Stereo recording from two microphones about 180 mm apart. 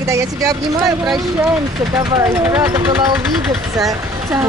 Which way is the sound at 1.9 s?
20° right (ahead or behind).